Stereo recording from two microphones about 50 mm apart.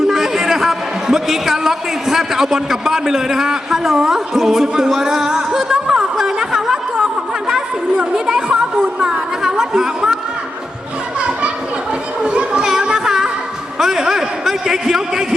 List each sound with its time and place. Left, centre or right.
0.1 s a man's voice: centre
5.5 s a sound: centre
9.4 s speech: centre
11.2 s children playing: right
12.8 s music: centre
13.7 s a man's voice: centre